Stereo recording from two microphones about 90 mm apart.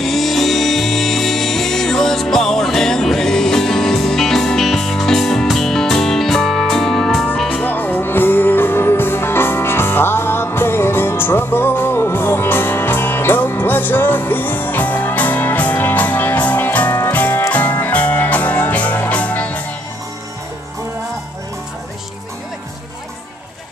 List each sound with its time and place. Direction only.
0.0 s music: centre (ahead or behind)
7.6 s music: 20° left (ahead or behind)